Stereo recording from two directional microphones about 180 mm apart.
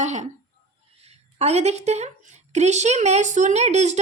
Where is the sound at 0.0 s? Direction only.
40° right (ahead or behind).